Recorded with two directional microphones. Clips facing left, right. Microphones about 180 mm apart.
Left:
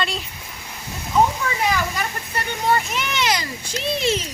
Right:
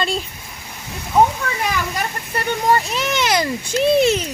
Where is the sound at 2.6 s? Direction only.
40° right (ahead or behind).